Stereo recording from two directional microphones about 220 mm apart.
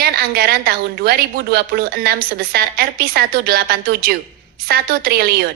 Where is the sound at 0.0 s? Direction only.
45° right (ahead or behind).